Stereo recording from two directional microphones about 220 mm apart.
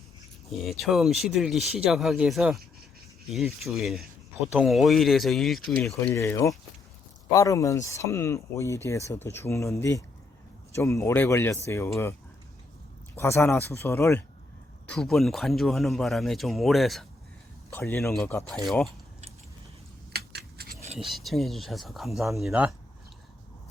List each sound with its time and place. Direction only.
0.5 s speech: centre (ahead or behind)
6.1 s speech: 10° left (ahead or behind)
13.1 s speech: 10° left (ahead or behind)
20.1 s a sound: 45° right (ahead or behind)
21.0 s speech: centre (ahead or behind)